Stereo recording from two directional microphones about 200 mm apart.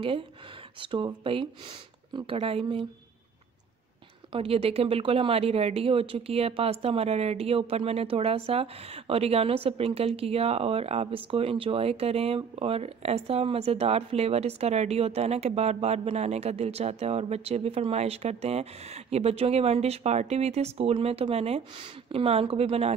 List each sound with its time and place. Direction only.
0.7 s speech: 25° right (ahead or behind)
4.3 s speech: 30° right (ahead or behind)